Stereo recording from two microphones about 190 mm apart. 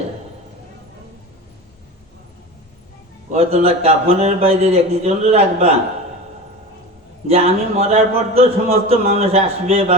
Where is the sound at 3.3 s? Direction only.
30° right (ahead or behind).